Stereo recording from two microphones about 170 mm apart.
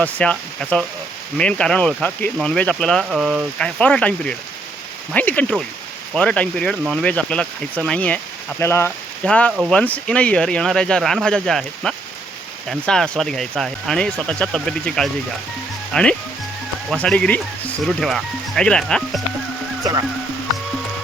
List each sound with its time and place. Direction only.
0.0 s speech: 5° left (ahead or behind)
9.5 s speech: 5° right (ahead or behind)
9.7 s speech: 5° left (ahead or behind)
19.8 s speech: 20° right (ahead or behind)